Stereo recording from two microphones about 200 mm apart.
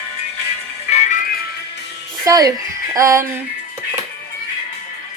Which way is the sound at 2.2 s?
20° right (ahead or behind).